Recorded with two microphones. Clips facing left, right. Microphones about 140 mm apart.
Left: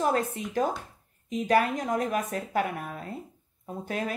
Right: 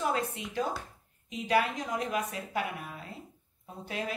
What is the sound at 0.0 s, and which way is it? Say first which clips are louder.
A woman's voice: left 5 dB; 45° left (ahead or behind).